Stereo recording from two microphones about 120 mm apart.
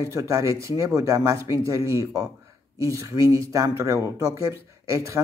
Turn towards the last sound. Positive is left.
turn(degrees=-25)  # may be behind; listen again after turning